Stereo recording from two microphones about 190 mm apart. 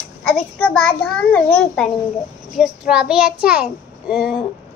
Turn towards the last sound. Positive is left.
turn(degrees=-5)  # may be behind; listen again after turning